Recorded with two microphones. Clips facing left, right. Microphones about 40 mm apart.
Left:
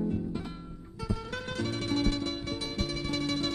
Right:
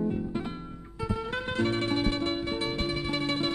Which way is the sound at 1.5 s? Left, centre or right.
Right.